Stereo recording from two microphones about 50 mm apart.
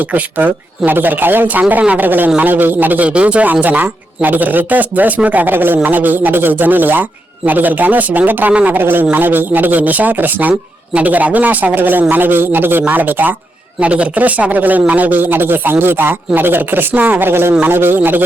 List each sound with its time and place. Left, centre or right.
0.0 s speech: right
3.1 s speech: right
8.8 s speech: right
13.7 s speech: right
17.2 s speech: right